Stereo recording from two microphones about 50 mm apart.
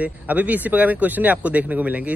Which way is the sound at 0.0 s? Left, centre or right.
Right.